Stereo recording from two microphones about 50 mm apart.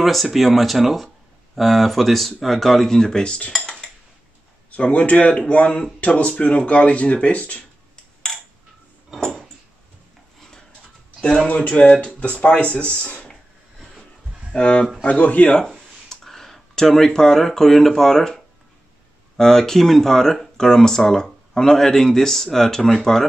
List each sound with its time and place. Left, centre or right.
0.0 s speech: centre; by 3.5 s left
3.5 s dishes: centre
4.9 s speech: left
7.9 s a sound: centre
11.4 s speech: left
14.6 s speech: centre
15.6 s speech: centre